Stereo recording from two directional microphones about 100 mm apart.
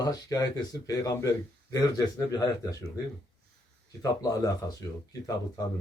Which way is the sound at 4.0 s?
35° left (ahead or behind).